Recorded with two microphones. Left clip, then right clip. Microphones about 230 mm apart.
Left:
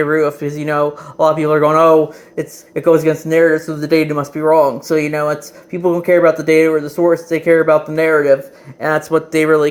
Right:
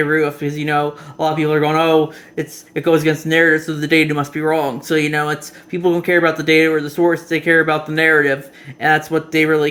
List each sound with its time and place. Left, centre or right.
0.0 s speech: centre